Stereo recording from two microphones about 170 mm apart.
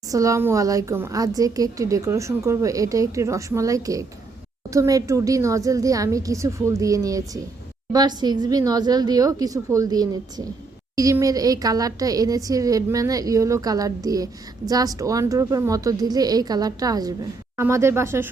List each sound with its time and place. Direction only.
0.1 s a woman's voice: 20° right (ahead or behind)